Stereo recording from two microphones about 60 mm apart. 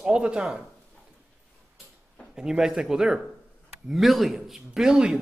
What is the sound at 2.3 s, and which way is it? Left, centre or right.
Speech, centre.